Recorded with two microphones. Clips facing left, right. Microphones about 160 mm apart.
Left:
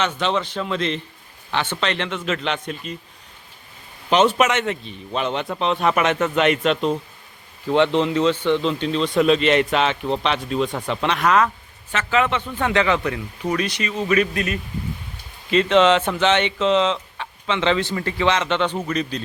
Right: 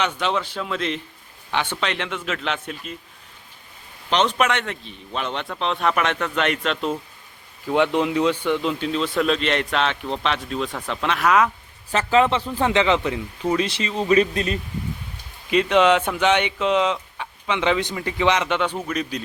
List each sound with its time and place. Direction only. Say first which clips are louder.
0.0 s speech: left 1 dB; 10° right (ahead or behind)
4.1 s speech: left 3 dB; 5° left (ahead or behind)
7.7 s speech: left 2 dB; 10° right (ahead or behind)
11.9 s a man's voice: right 3 dB; 35° right (ahead or behind)
15.4 s speech: left 1 dB; 10° right (ahead or behind)